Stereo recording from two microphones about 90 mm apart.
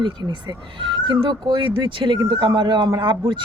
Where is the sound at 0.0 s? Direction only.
55° right (ahead or behind).